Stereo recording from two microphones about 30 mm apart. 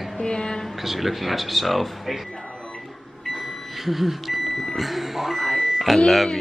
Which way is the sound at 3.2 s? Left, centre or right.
Centre.